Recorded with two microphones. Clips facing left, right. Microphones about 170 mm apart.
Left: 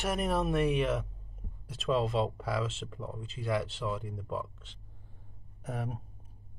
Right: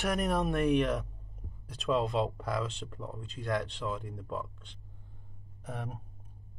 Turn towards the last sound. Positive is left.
turn(degrees=0)  # may be behind; listen again after turning